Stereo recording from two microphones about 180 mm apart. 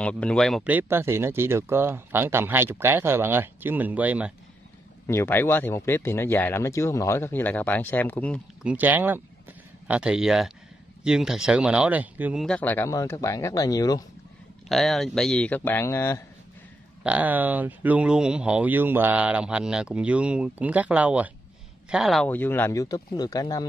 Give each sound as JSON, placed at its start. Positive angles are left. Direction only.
{"t": 0.0, "sound": "speech", "side_deg": 5}
{"t": 0.7, "sound": "speech", "side_deg": -10}
{"t": 5.0, "sound": "speech", "side_deg": 15}
{"t": 8.6, "sound": "speech", "side_deg": -10}
{"t": 12.4, "sound": "speech", "side_deg": 10}
{"t": 14.7, "sound": "speech", "side_deg": 0}
{"t": 17.0, "sound": "speech", "side_deg": -10}